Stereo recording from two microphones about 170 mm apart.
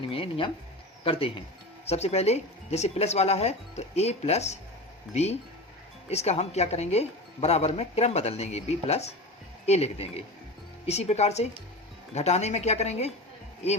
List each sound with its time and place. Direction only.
0.0 s a woman's voice: 30° left (ahead or behind)